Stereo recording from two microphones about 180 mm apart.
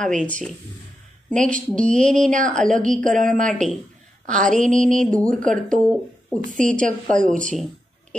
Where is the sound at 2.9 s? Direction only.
45° right (ahead or behind).